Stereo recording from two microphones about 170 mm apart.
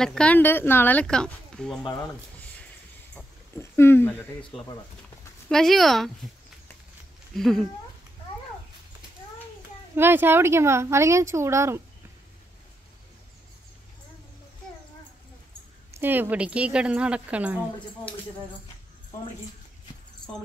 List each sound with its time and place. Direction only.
0.0 s speech: 5° left (ahead or behind)
3.2 s a sound: 15° left (ahead or behind)
5.5 s speech: centre (ahead or behind)
7.3 s speech: centre (ahead or behind)
9.9 s speech: 15° right (ahead or behind)
15.9 s speech: 10° right (ahead or behind)